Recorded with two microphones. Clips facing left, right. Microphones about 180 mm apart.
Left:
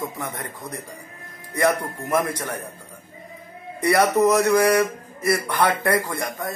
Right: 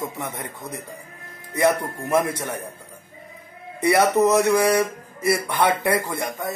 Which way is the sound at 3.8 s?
25° right (ahead or behind).